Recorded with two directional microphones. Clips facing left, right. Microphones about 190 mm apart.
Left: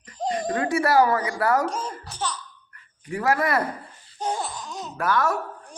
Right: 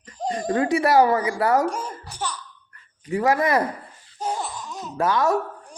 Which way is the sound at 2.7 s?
25° right (ahead or behind).